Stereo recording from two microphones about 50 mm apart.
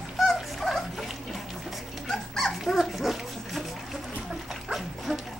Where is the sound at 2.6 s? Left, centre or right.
Centre.